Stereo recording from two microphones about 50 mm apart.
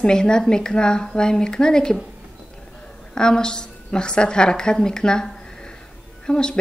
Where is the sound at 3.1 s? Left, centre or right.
Centre.